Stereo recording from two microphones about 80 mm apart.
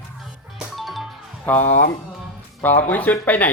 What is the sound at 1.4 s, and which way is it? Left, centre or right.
Speech, left.